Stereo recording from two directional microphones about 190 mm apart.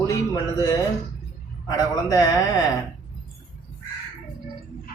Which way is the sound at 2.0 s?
15° left (ahead or behind).